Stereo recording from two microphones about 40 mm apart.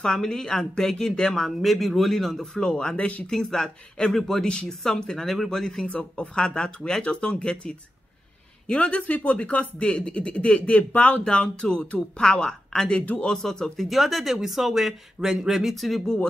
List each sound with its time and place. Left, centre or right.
0.0 s speech: centre
3.0 s speech: left
3.3 s speech: centre
5.9 s speech: left
11.2 s speech: centre
13.8 s speech: centre
15.7 s speech: centre